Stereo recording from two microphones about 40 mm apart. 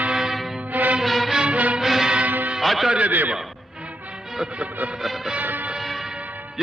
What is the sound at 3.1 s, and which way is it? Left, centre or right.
Speech, right.